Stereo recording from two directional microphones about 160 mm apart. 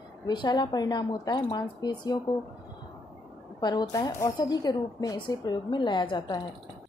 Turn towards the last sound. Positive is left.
turn(degrees=30)  # may be behind; listen again after turning